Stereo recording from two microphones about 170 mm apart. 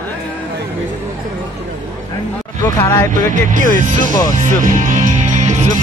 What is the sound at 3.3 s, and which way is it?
Speech, 50° right (ahead or behind).